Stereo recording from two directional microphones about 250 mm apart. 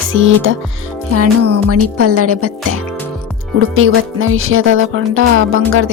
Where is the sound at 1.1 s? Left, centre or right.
Right.